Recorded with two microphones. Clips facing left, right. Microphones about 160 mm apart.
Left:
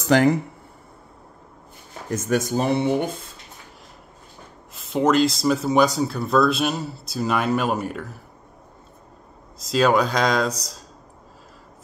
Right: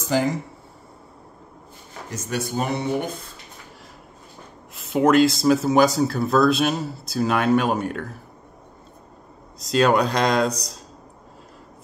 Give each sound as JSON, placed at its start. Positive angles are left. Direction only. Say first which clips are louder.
{"t": 0.0, "sound": "speech", "louder": "left 5 dB", "side_deg": 65}
{"t": 2.0, "sound": "speech", "louder": "left 6 dB", "side_deg": 50}
{"t": 4.7, "sound": "speech", "louder": "right 2 dB", "side_deg": 0}
{"t": 9.6, "sound": "speech", "louder": "even", "side_deg": 0}